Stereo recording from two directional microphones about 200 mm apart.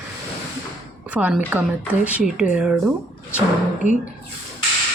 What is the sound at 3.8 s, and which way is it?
Speech, 35° left (ahead or behind).